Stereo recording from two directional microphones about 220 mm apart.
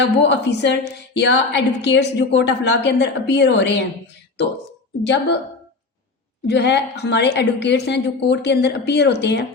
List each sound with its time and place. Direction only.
0.0 s a woman's voice: 50° left (ahead or behind)
6.5 s a woman's voice: 50° left (ahead or behind)